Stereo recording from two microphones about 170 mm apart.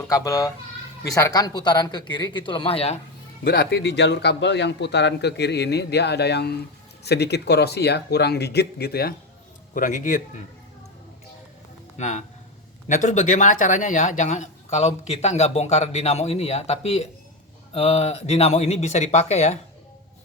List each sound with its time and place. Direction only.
0.1 s a man's voice: 20° left (ahead or behind); by 3.0 s 35° left (ahead or behind)
3.4 s a man's voice: 65° left (ahead or behind)
9.7 s speech: 50° left (ahead or behind)
11.9 s speech: 45° left (ahead or behind)